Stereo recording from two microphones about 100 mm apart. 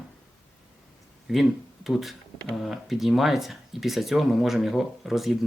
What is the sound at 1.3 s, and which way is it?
Speech, 5° right (ahead or behind).